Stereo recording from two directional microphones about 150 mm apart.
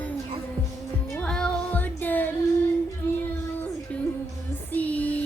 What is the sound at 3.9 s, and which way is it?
Music, 10° left (ahead or behind).